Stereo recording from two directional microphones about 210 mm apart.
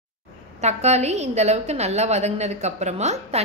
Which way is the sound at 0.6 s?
30° right (ahead or behind).